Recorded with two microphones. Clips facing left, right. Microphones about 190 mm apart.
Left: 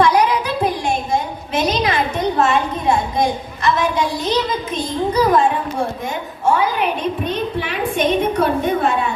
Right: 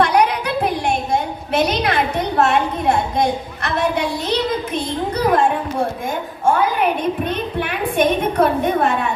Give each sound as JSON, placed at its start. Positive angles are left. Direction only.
{"t": 0.0, "sound": "a sound", "side_deg": -60}
{"t": 2.4, "sound": "a woman's voice", "side_deg": -65}
{"t": 7.3, "sound": "a woman's voice", "side_deg": -55}